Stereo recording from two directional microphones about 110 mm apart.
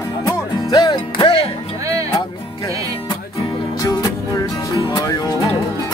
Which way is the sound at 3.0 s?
35° left (ahead or behind).